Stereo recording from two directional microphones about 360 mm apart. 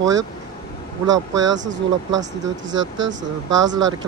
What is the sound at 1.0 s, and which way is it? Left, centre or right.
Speech, centre.